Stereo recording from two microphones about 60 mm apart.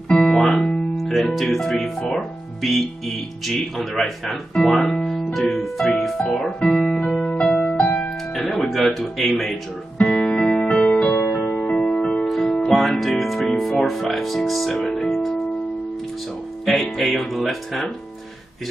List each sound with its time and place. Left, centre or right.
0.2 s music: centre
2.1 s speech: centre
6.1 s speech: centre
7.5 s music: left
8.4 s music: centre
8.6 s speech: centre
10.0 s music: centre
11.1 s music: left
12.4 s speech: centre
16.6 s speech: centre